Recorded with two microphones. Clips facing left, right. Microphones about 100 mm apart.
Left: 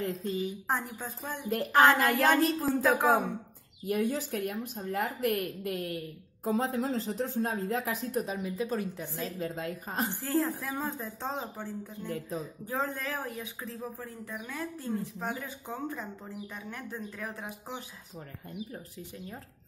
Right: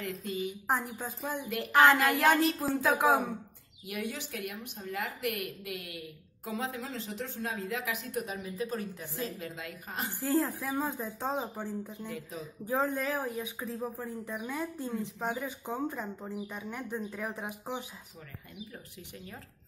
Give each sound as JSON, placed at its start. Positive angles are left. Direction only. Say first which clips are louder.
{"t": 0.0, "sound": "a woman's voice", "louder": "left 3 dB", "side_deg": 35}
{"t": 0.7, "sound": "speech", "louder": "right 1 dB", "side_deg": -5}
{"t": 1.5, "sound": "a woman's voice", "louder": "left 1 dB", "side_deg": 40}
{"t": 2.0, "sound": "speech", "louder": "left 1 dB", "side_deg": -5}
{"t": 3.8, "sound": "a woman's voice", "louder": "left 8 dB", "side_deg": 40}
{"t": 10.2, "sound": "speech", "louder": "right 3 dB", "side_deg": -10}
{"t": 12.1, "sound": "a woman's voice", "louder": "left 5 dB", "side_deg": 40}
{"t": 12.6, "sound": "speech", "louder": "right 5 dB", "side_deg": -15}